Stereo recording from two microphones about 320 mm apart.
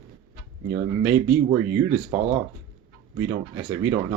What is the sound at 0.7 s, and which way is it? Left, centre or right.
Speech, centre.